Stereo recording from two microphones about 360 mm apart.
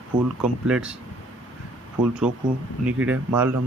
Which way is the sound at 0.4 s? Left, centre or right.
Centre.